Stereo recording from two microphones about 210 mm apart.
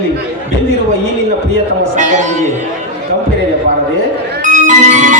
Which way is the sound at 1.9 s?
35° right (ahead or behind).